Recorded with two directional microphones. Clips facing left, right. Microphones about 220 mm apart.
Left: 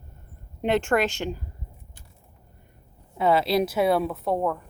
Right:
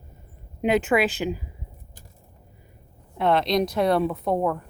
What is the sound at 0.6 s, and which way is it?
Speech, 5° right (ahead or behind).